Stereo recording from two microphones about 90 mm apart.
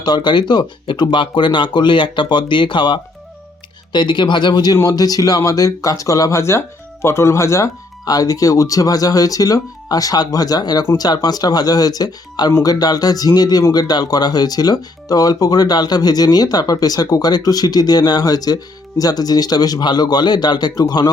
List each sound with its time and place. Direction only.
0.0 s speech: 55° left (ahead or behind)